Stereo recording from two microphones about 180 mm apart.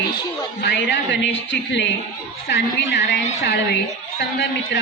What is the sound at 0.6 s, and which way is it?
A woman's voice, 75° left (ahead or behind).